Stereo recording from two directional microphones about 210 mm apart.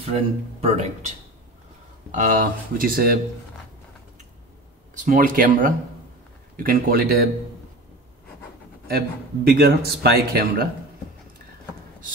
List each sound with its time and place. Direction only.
0.1 s speech: 30° right (ahead or behind)
2.1 s a man's voice: 40° right (ahead or behind)
4.9 s a man's voice: 40° right (ahead or behind)
8.8 s a man's voice: 45° right (ahead or behind)